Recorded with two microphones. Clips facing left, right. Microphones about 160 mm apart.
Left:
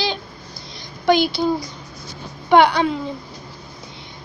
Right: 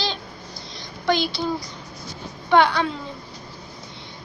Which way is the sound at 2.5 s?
15° left (ahead or behind).